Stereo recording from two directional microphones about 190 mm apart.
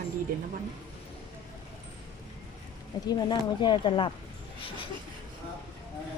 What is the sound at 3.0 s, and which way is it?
Speech, 20° left (ahead or behind).